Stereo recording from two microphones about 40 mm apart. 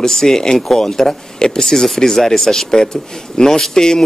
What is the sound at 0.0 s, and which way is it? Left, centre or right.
Speech, centre.